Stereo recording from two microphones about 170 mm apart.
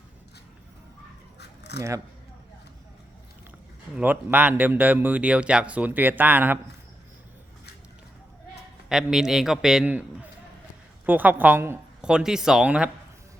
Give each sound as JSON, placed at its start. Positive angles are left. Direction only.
{"t": 1.4, "sound": "a sound", "side_deg": 75}
{"t": 3.9, "sound": "speech", "side_deg": -10}
{"t": 8.9, "sound": "a man's voice", "side_deg": -5}